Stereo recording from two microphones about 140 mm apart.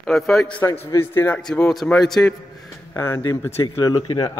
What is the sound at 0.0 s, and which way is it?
A man's voice, 5° left (ahead or behind).